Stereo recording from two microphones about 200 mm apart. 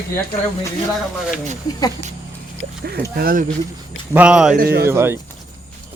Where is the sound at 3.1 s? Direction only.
45° right (ahead or behind).